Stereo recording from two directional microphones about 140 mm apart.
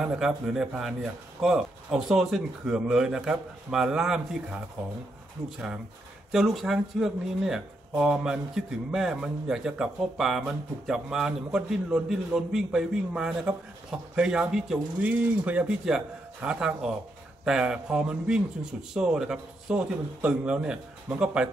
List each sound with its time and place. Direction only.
0.0 s a man's voice: 5° right (ahead or behind)
6.3 s a man's voice: centre (ahead or behind)